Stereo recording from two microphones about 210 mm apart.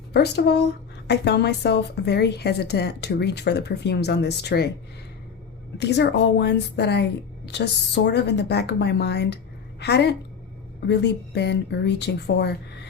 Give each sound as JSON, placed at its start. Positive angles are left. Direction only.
{"t": 0.1, "sound": "a woman's voice", "side_deg": 50}
{"t": 5.7, "sound": "a woman's voice", "side_deg": 55}